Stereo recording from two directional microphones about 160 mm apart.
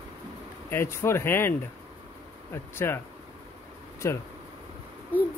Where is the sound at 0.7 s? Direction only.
15° left (ahead or behind).